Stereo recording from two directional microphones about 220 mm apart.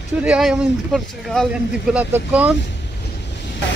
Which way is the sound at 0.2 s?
5° right (ahead or behind).